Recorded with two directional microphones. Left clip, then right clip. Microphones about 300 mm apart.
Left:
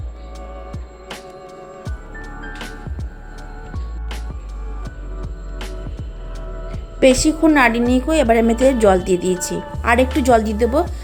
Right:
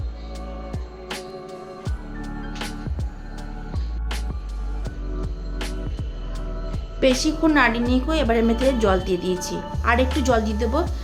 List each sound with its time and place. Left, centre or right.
7.0 s a woman's voice: centre